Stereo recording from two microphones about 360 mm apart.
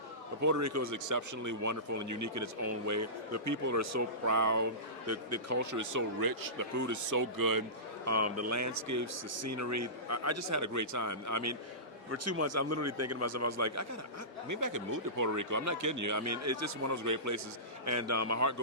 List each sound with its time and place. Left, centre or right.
0.4 s speech: right
8.0 s speech: right